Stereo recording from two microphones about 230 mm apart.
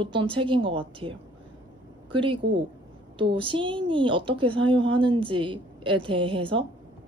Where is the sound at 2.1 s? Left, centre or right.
Right.